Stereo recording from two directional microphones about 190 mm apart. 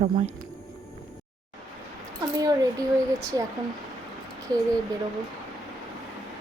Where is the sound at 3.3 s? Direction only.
20° right (ahead or behind).